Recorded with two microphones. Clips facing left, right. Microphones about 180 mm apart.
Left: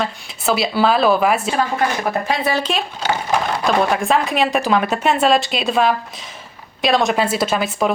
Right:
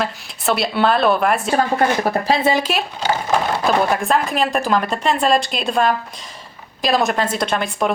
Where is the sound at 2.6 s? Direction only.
5° right (ahead or behind).